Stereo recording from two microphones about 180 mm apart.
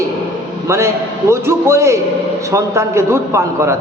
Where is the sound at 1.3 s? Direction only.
15° right (ahead or behind).